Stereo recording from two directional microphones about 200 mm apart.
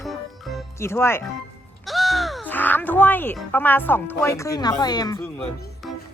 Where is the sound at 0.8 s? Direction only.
15° left (ahead or behind).